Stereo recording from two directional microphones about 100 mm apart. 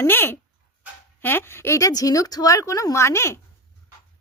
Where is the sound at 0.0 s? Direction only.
20° left (ahead or behind).